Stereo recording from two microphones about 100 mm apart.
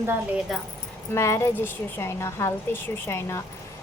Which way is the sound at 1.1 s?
25° left (ahead or behind).